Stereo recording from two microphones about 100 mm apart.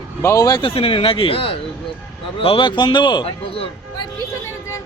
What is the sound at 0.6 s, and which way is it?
Speech, 65° left (ahead or behind).